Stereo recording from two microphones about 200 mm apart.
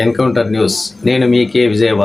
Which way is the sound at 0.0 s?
Centre (ahead or behind).